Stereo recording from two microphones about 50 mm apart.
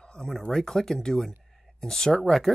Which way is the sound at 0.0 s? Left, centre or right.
Centre.